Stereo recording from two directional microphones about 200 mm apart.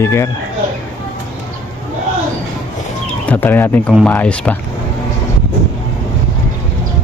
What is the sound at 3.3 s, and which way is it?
Speech, 10° left (ahead or behind).